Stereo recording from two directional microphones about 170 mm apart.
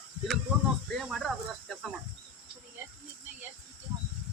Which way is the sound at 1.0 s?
Centre (ahead or behind).